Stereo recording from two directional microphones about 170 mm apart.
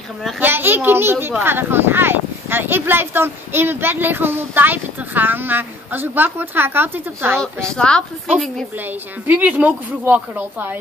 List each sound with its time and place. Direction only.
0.4 s speech: 10° right (ahead or behind)
7.7 s a woman's voice: 5° left (ahead or behind)
9.3 s speech: 10° right (ahead or behind)